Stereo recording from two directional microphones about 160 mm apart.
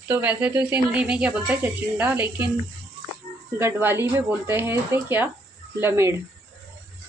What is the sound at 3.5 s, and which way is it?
Speech, 15° right (ahead or behind).